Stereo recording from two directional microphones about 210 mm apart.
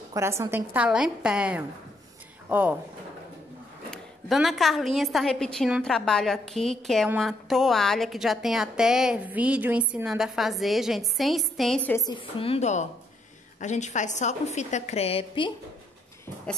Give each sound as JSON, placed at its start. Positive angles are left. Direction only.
{"t": 0.1, "sound": "a woman's voice", "side_deg": -15}
{"t": 3.9, "sound": "a woman's voice", "side_deg": 0}
{"t": 12.1, "sound": "a woman's voice", "side_deg": 25}